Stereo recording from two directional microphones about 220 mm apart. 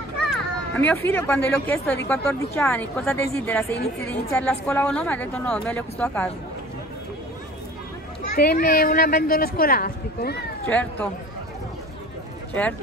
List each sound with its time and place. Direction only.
0.3 s speech: 5° left (ahead or behind)
8.4 s a woman's voice: 45° left (ahead or behind)
10.7 s speech: 5° left (ahead or behind)